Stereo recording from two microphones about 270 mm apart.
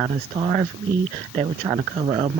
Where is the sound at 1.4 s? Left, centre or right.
Right.